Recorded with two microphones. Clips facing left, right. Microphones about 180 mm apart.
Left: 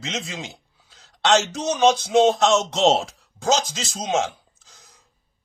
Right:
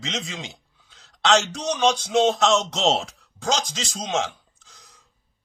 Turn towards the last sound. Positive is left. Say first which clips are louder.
# even
turn(degrees=0)  # may be behind; listen again after turning